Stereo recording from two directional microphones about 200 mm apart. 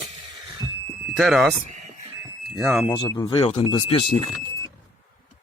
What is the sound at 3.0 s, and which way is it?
Speech, 20° left (ahead or behind).